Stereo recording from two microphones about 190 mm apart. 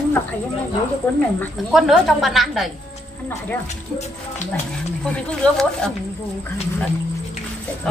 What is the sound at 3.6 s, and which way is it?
Speech, 35° left (ahead or behind).